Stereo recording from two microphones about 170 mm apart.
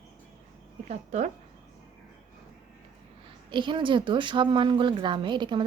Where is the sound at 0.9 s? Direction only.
40° right (ahead or behind).